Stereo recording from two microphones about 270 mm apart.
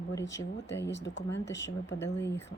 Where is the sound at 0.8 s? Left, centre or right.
Left.